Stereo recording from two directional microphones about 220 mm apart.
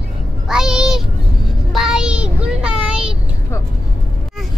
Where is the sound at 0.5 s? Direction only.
5° right (ahead or behind).